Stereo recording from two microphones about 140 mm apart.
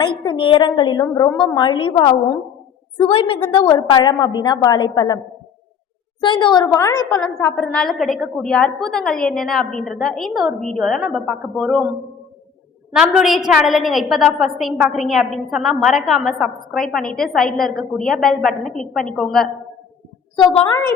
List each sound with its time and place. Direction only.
0.0 s a woman's voice: 35° left (ahead or behind)
3.0 s a woman's voice: 40° left (ahead or behind); by 7.2 s 25° left (ahead or behind)
7.5 s a woman's voice: 5° left (ahead or behind)
12.9 s a woman's voice: 5° right (ahead or behind)
20.7 s a woman's voice: 20° left (ahead or behind)